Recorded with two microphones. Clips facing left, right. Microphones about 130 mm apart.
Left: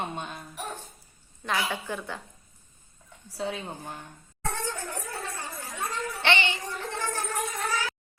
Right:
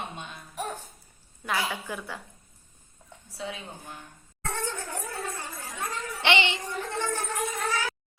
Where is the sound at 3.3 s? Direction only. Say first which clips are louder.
Left 4 dB; 45° left (ahead or behind).